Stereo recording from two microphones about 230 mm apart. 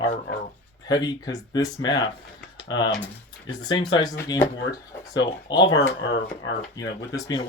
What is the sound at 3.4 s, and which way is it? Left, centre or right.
Speech, centre.